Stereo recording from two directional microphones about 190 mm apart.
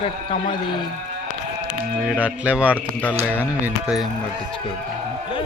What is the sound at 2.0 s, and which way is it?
Music, 5° right (ahead or behind).